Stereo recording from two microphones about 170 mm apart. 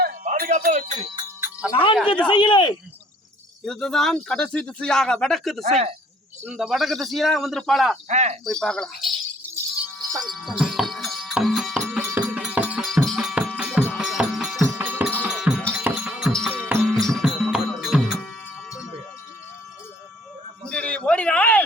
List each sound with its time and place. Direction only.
0.0 s music: 60° right (ahead or behind)
0.9 s speech: 30° right (ahead or behind)
1.7 s speech: 30° left (ahead or behind)
3.6 s speech: 5° left (ahead or behind)
5.6 s speech: 40° right (ahead or behind)
6.4 s speech: 5° right (ahead or behind)
8.0 s speech: 45° right (ahead or behind)
8.4 s speech: 5° left (ahead or behind)
10.2 s music: centre (ahead or behind)
16.5 s music: 10° right (ahead or behind)
16.8 s music: centre (ahead or behind)
20.7 s a sound: 5° left (ahead or behind)